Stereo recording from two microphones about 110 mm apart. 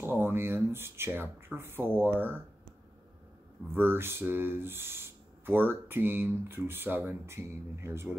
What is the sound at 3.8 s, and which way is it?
Speech, 20° right (ahead or behind).